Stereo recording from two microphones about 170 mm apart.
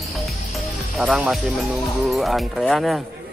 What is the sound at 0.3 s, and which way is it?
Speech, centre (ahead or behind).